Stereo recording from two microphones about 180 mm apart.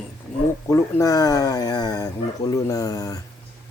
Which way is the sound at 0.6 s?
15° left (ahead or behind).